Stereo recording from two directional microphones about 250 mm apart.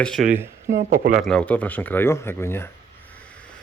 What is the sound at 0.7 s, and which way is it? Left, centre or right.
Speech, right.